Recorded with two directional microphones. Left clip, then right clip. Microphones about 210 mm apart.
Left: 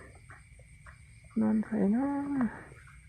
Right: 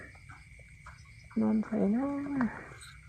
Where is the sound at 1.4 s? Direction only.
20° left (ahead or behind).